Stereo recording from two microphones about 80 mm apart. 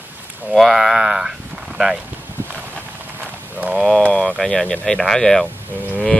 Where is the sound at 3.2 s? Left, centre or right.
Right.